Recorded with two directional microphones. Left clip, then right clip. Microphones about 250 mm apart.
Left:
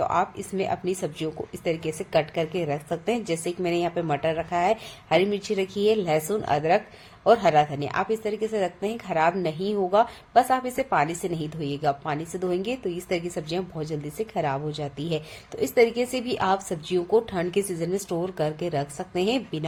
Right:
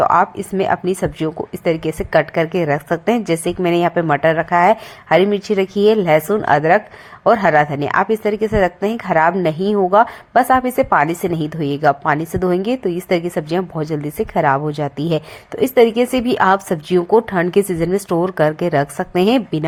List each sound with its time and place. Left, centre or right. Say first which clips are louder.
0.0 s speech: right 11 dB; right